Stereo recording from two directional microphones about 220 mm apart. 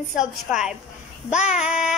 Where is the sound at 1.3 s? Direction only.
30° left (ahead or behind).